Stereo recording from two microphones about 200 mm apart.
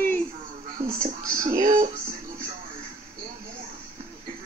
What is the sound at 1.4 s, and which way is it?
Music, 40° right (ahead or behind).